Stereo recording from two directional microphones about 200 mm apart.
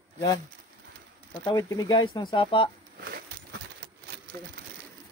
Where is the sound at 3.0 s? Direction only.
50° right (ahead or behind).